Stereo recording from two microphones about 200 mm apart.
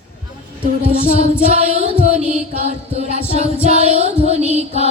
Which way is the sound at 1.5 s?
35° right (ahead or behind).